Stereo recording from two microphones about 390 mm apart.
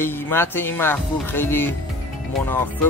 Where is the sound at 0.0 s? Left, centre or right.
Centre.